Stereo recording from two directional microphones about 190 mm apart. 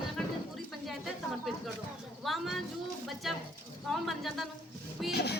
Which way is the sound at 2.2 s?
Centre (ahead or behind).